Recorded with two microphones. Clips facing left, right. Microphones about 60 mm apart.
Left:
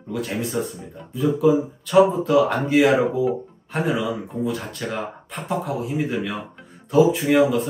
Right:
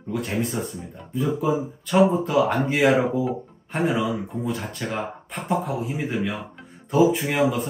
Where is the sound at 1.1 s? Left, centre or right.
Centre.